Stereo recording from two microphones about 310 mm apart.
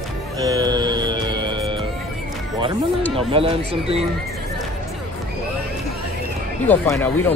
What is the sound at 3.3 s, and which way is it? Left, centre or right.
Speech, centre.